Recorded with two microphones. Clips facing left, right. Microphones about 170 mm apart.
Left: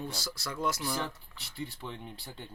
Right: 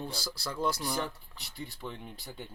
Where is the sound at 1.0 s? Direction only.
Centre (ahead or behind).